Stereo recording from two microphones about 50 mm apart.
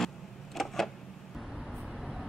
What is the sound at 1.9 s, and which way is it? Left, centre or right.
Vehicle, centre.